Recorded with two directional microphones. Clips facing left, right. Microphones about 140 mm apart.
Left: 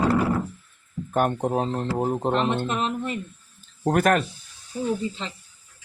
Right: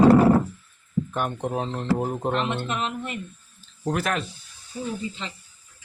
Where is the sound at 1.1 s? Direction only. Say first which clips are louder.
Left 8 dB; 45° left (ahead or behind).